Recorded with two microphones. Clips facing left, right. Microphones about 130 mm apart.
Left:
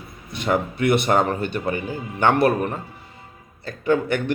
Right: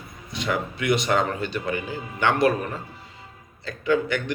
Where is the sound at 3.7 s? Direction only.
50° left (ahead or behind).